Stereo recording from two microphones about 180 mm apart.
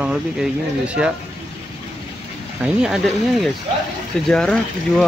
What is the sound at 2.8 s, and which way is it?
Speech, centre (ahead or behind).